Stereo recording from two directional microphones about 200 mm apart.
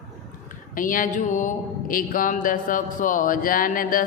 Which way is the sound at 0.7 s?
45° left (ahead or behind).